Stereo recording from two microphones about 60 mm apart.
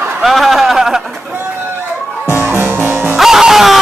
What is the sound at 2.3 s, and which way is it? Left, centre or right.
Music, right.